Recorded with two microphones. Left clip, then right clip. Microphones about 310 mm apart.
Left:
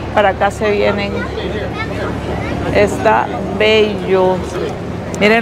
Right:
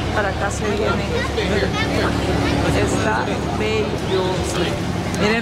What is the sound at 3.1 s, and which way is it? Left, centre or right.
Speech, left.